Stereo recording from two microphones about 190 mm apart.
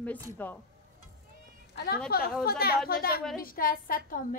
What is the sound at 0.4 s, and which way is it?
Speech, 10° left (ahead or behind).